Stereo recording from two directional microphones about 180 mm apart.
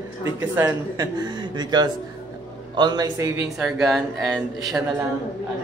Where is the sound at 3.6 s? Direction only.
5° right (ahead or behind).